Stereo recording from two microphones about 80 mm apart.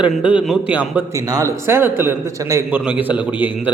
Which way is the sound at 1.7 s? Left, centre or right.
Right.